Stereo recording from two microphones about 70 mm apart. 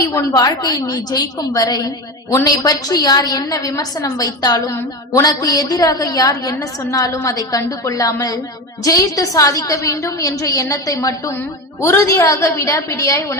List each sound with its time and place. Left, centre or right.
0.1 s a woman's voice: left
3.2 s a woman's voice: left
4.7 s a woman's voice: left